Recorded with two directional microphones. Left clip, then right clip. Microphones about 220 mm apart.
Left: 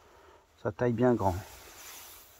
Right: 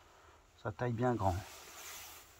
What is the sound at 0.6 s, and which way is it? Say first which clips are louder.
Speech: left 8 dB; 35° left (ahead or behind).